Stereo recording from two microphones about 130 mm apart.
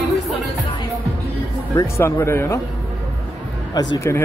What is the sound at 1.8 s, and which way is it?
Speech, 20° left (ahead or behind).